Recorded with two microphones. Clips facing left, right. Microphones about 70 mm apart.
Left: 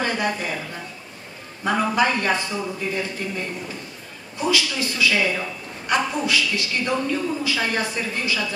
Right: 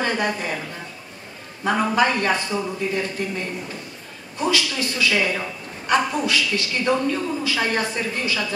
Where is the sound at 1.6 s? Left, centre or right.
Centre.